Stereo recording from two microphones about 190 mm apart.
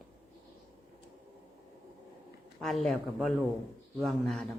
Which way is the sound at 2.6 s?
Centre (ahead or behind).